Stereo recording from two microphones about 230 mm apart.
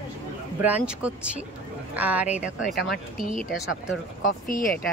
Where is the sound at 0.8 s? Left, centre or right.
Centre.